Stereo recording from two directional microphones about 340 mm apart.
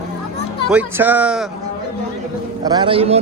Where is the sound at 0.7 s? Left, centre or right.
Centre.